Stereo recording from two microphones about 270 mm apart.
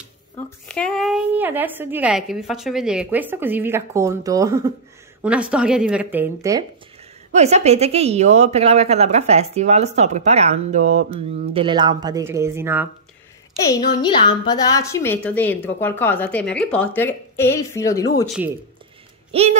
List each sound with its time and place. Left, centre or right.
0.7 s a woman's voice: centre
7.3 s a woman's voice: right; by 12.8 s centre
14.0 s a woman's voice: centre
19.3 s a woman's voice: right